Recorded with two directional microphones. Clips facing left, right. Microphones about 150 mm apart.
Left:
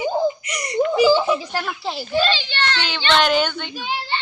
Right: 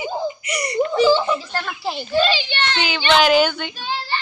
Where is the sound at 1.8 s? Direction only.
Centre (ahead or behind).